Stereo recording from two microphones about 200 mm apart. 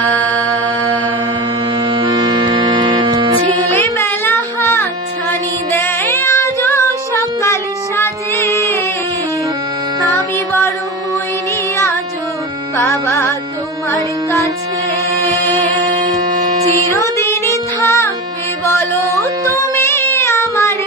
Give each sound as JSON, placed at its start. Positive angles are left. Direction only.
{"t": 0.0, "sound": "music", "side_deg": 10}
{"t": 1.9, "sound": "music", "side_deg": -20}
{"t": 3.8, "sound": "a sound", "side_deg": 10}
{"t": 5.3, "sound": "female singing", "side_deg": 10}
{"t": 12.8, "sound": "music", "side_deg": 15}
{"t": 16.9, "sound": "music", "side_deg": 15}
{"t": 19.7, "sound": "a sound", "side_deg": 15}